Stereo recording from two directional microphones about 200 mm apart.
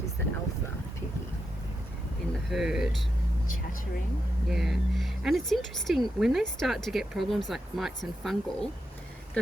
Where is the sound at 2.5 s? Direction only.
Centre (ahead or behind).